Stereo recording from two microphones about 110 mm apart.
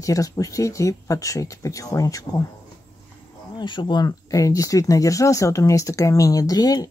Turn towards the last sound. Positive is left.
turn(degrees=35)  # may be behind; listen again after turning